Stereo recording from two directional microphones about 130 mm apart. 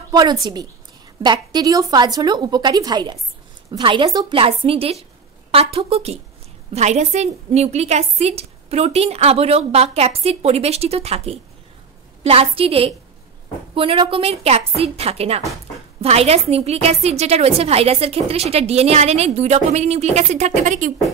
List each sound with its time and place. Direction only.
0.1 s a woman's voice: 30° right (ahead or behind); by 6.1 s 50° right (ahead or behind)
6.7 s a woman's voice: 60° right (ahead or behind)